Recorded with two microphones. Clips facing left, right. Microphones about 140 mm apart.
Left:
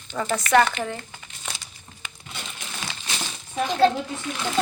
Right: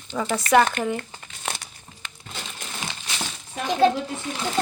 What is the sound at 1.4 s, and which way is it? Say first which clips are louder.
Crumpling: right 6 dB; 55° right (ahead or behind).